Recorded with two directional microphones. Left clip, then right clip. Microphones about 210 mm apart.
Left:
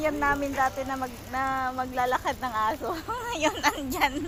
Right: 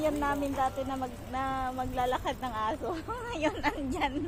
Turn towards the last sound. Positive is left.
turn(degrees=10)  # may be behind; listen again after turning